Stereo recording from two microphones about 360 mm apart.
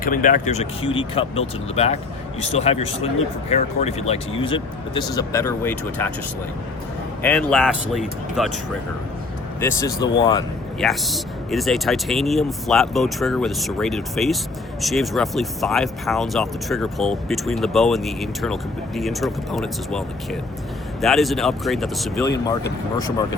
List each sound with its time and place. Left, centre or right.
0.0 s speech: left; by 6.1 s centre
7.2 s speech: centre
9.6 s speech: centre
10.8 s speech: centre